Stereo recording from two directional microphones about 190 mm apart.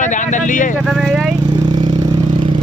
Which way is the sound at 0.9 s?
Centre (ahead or behind).